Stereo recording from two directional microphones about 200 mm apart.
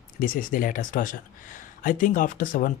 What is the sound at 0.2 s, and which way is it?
Speech, 45° left (ahead or behind).